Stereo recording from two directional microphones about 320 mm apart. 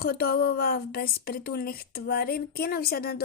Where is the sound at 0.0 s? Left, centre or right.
Left.